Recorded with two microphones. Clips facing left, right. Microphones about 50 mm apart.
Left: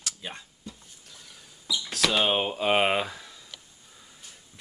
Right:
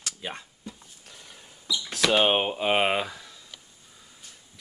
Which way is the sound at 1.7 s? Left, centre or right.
Centre.